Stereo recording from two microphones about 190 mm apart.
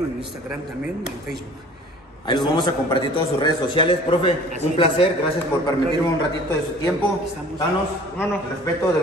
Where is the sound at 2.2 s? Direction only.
25° left (ahead or behind).